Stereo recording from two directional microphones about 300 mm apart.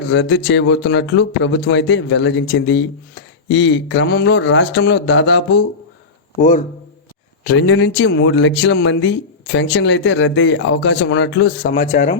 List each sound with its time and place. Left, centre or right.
0.1 s a man's voice: left
7.4 s speech: left